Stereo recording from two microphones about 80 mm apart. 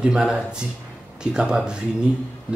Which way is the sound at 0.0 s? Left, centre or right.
Centre.